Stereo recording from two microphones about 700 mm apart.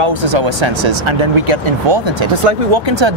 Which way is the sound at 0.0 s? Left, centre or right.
Right.